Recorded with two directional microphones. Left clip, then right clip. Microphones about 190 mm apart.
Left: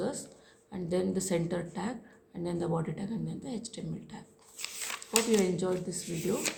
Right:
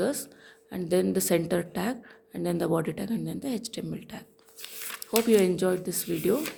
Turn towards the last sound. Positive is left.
turn(degrees=-50)  # may be behind; listen again after turning